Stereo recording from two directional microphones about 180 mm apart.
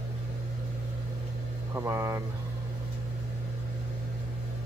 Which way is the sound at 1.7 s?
15° right (ahead or behind).